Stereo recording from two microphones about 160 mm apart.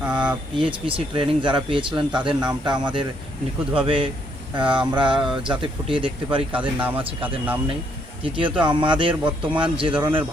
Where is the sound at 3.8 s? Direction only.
35° right (ahead or behind).